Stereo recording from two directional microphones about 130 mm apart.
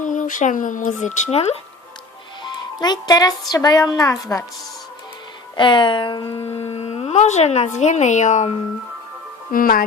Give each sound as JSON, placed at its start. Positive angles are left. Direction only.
{"t": 0.0, "sound": "speech", "side_deg": 80}
{"t": 2.8, "sound": "a woman's voice", "side_deg": 30}
{"t": 5.5, "sound": "speech", "side_deg": 40}
{"t": 9.5, "sound": "speech", "side_deg": 90}